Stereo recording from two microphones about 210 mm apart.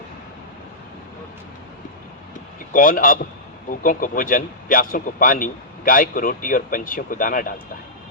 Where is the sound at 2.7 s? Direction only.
40° left (ahead or behind).